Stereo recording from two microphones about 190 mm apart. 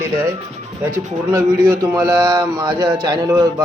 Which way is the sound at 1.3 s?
15° right (ahead or behind).